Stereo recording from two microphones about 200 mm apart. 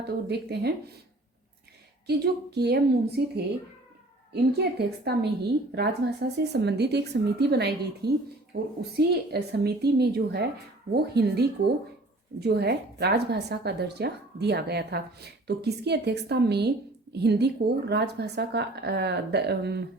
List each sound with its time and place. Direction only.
0.3 s a woman's voice: 55° right (ahead or behind)
2.0 s a woman's voice: 55° right (ahead or behind)